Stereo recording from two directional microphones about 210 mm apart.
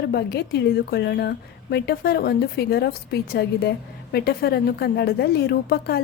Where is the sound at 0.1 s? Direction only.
50° left (ahead or behind).